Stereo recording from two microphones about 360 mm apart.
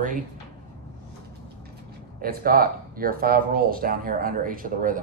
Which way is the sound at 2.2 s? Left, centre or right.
Right.